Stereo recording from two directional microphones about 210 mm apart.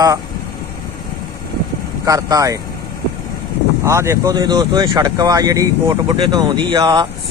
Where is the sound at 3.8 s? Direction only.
15° right (ahead or behind).